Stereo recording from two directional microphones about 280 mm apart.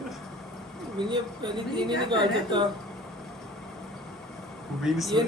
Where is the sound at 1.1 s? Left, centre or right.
Centre.